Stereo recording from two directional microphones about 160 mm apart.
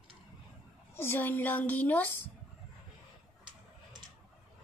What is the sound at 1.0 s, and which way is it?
A woman's voice, 15° left (ahead or behind).